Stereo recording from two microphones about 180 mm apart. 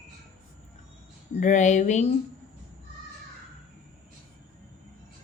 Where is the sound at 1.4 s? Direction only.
40° left (ahead or behind).